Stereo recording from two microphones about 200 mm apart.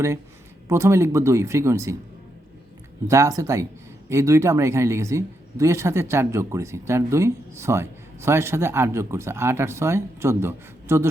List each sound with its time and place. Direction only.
0.7 s speech: 15° right (ahead or behind)
3.1 s speech: 15° right (ahead or behind)